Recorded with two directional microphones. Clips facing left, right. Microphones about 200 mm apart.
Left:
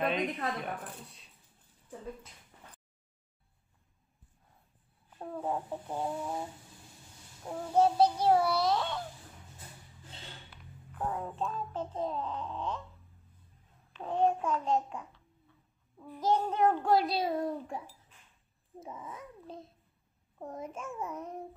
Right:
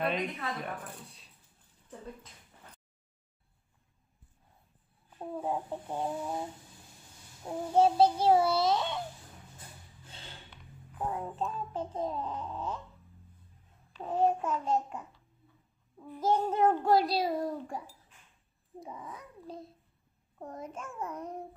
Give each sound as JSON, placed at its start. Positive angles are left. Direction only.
{"t": 0.0, "sound": "a child's voice", "side_deg": 0}
{"t": 5.2, "sound": "child singing", "side_deg": -10}
{"t": 7.7, "sound": "a child's voice", "side_deg": -25}
{"t": 11.0, "sound": "child singing", "side_deg": -5}
{"t": 13.9, "sound": "a child's voice", "side_deg": -5}
{"t": 16.0, "sound": "child singing", "side_deg": -10}
{"t": 18.8, "sound": "a child's voice", "side_deg": 5}